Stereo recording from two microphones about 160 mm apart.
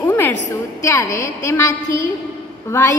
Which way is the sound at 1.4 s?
20° left (ahead or behind).